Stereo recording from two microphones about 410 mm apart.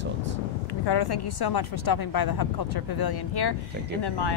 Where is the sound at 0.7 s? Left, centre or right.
Left.